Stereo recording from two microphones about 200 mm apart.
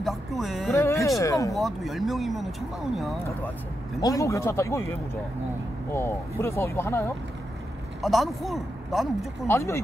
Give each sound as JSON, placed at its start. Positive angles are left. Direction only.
{"t": 0.0, "sound": "music", "side_deg": 0}
{"t": 1.0, "sound": "speech", "side_deg": 15}
{"t": 1.5, "sound": "speech", "side_deg": 0}
{"t": 4.0, "sound": "speech", "side_deg": 15}
{"t": 5.9, "sound": "speech", "side_deg": 15}
{"t": 8.0, "sound": "speech", "side_deg": 0}
{"t": 9.5, "sound": "speech", "side_deg": 15}